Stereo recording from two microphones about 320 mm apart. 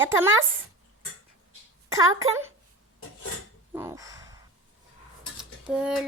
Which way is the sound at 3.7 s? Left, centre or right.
Centre.